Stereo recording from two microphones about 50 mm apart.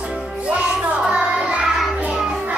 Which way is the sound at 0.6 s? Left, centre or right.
Right.